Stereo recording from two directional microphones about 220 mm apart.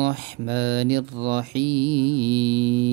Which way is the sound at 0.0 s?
50° right (ahead or behind).